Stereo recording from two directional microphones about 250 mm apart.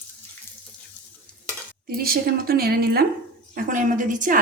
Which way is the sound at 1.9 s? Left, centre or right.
Right.